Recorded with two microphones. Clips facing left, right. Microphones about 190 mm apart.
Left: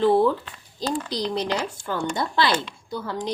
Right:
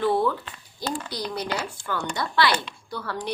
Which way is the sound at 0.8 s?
20° left (ahead or behind).